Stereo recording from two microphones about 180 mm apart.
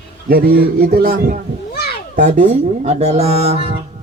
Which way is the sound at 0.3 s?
55° right (ahead or behind).